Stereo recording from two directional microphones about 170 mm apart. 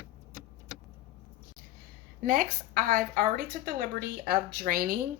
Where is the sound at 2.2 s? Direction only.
55° right (ahead or behind).